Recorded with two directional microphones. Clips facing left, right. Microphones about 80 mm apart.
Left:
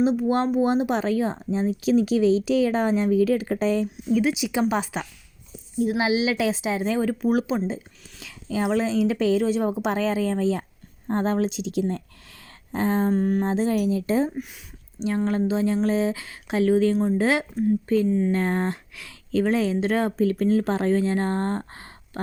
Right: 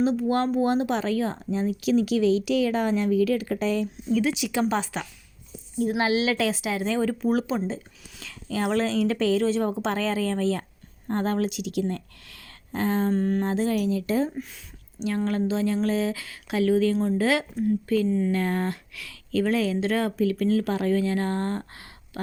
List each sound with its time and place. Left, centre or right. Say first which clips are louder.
0.6 s speech: left 2 dB; left
3.9 s a woman's voice: left 2 dB; centre
5.8 s a woman's voice: left 1 dB; centre
7.1 s a woman's voice: left 2 dB; centre; by 13.1 s left
13.1 s a woman's voice: left 2 dB; centre
13.5 s speech: left 2 dB; left